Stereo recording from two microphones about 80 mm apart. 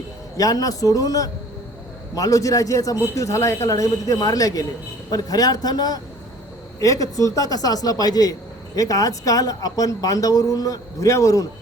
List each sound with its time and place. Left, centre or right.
0.3 s a man's voice: left
6.7 s a man's voice: left